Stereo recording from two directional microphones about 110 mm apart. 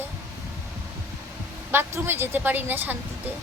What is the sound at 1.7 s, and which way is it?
A woman's voice, 20° right (ahead or behind).